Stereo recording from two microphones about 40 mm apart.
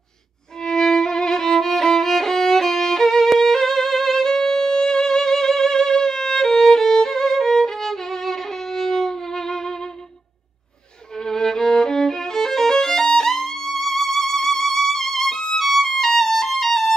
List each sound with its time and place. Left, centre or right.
0.6 s violin: centre
11.1 s violin: centre